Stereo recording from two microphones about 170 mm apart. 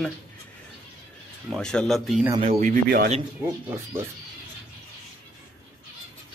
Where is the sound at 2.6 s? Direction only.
55° right (ahead or behind).